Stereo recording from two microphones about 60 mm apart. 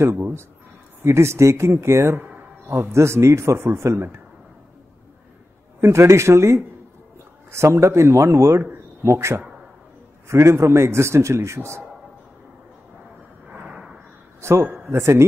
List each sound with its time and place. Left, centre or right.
0.0 s a man's voice: right
5.8 s a man's voice: right
13.5 s a sound: right
14.4 s a man's voice: right